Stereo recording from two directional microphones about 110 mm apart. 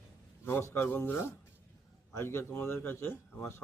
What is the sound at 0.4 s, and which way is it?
A man's voice, 20° left (ahead or behind).